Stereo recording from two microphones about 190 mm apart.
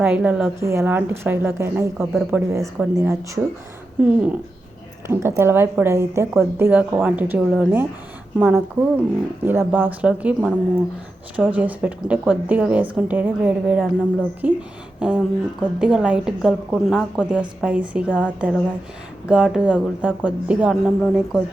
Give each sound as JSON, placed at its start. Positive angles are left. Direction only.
{"t": 0.0, "sound": "a woman's voice", "side_deg": -5}